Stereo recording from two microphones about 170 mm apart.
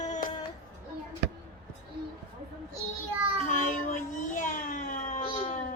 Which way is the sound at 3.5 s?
50° left (ahead or behind).